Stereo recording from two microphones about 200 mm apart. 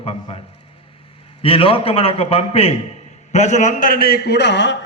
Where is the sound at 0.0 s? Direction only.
30° left (ahead or behind).